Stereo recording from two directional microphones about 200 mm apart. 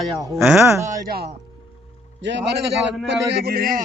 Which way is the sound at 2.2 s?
60° right (ahead or behind).